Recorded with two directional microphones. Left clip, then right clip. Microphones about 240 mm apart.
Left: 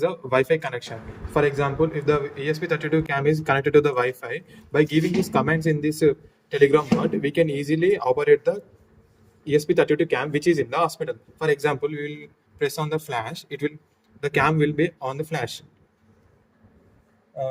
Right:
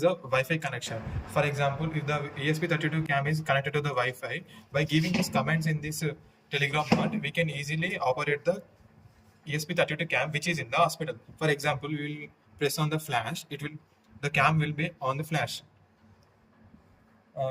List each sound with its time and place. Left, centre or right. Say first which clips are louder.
0.0 s a man's voice: left 4 dB; left